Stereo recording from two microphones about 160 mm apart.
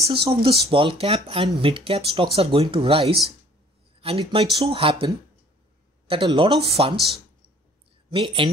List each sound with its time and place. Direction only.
0.0 s speech: 35° right (ahead or behind)
8.1 s speech: 35° right (ahead or behind)